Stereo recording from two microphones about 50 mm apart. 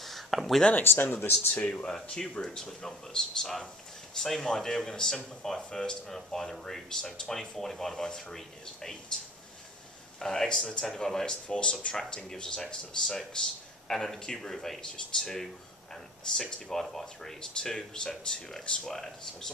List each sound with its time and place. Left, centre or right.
0.0 s a sound: centre
0.8 s speech: left
1.5 s speech: left
2.0 s speech: centre
10.1 s speech: centre
11.4 s speech: left